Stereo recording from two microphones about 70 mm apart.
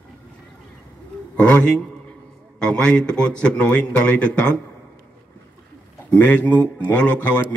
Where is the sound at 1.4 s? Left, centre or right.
Centre.